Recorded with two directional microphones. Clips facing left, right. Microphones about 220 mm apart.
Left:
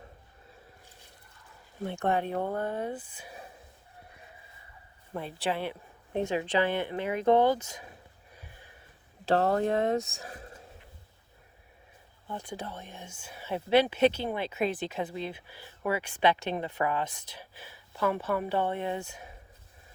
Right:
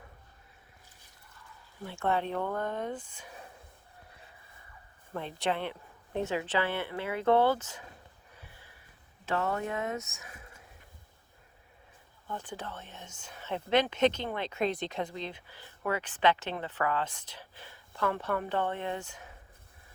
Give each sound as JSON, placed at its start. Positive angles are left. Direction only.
{"t": 1.8, "sound": "speech", "side_deg": 20}
{"t": 2.3, "sound": "speech", "side_deg": 45}
{"t": 2.6, "sound": "speech", "side_deg": 10}
{"t": 5.1, "sound": "speech", "side_deg": 10}
{"t": 9.2, "sound": "speech", "side_deg": 35}
{"t": 12.3, "sound": "speech", "side_deg": 10}